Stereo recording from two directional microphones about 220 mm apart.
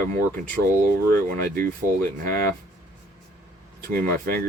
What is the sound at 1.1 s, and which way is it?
Speech, 40° right (ahead or behind).